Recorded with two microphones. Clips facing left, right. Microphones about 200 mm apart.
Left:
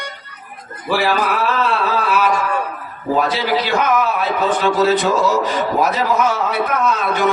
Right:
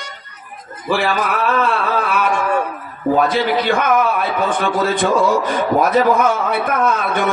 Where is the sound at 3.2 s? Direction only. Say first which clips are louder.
Right 1 dB; 50° right (ahead or behind).